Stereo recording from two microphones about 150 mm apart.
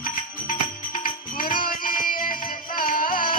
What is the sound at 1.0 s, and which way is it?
Music, 70° left (ahead or behind).